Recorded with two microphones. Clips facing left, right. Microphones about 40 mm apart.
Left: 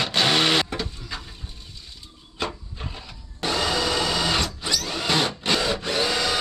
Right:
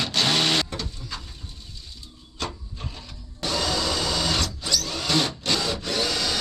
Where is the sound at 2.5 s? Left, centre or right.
Centre.